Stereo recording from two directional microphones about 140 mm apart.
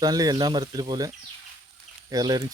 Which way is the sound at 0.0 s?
25° right (ahead or behind).